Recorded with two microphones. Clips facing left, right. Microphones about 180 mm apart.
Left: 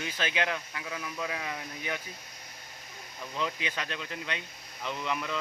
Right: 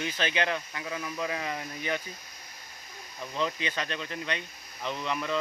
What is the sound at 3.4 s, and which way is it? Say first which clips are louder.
Speech: right 3 dB; 10° left (ahead or behind).